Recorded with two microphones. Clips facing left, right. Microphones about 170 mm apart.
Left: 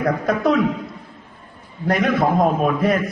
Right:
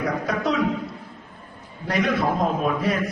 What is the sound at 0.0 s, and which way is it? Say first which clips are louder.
Speech: left 5 dB; 50° left (ahead or behind).